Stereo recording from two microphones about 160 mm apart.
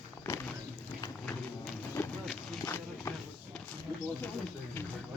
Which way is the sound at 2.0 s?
15° left (ahead or behind).